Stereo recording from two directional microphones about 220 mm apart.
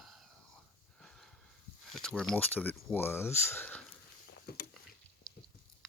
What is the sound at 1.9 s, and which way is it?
Speech, 5° left (ahead or behind).